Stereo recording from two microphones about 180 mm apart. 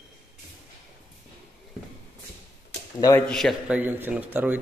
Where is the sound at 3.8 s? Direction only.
10° right (ahead or behind).